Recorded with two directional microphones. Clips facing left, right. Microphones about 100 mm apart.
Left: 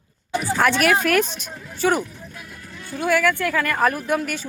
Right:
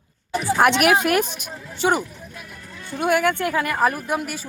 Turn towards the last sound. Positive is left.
turn(degrees=-5)  # may be behind; listen again after turning